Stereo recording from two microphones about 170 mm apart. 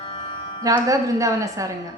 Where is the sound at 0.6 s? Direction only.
20° right (ahead or behind).